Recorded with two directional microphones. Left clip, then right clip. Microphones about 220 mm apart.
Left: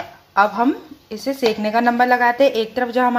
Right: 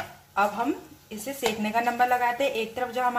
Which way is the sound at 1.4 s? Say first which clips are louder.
Left 8 dB; 35° left (ahead or behind).